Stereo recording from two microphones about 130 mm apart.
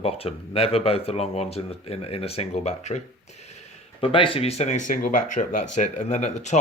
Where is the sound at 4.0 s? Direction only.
40° left (ahead or behind).